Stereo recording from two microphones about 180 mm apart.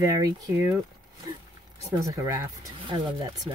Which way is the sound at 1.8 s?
15° right (ahead or behind).